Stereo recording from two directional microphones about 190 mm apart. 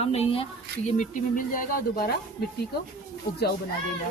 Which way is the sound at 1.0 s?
45° left (ahead or behind).